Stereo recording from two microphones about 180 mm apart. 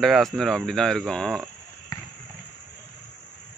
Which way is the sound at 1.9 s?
20° left (ahead or behind).